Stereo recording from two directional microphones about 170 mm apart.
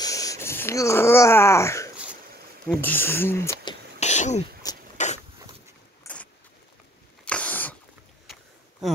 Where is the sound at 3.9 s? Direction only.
40° left (ahead or behind).